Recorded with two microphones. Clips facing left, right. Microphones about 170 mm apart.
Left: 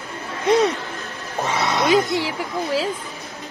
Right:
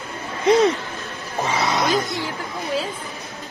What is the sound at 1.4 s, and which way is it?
Music, centre (ahead or behind).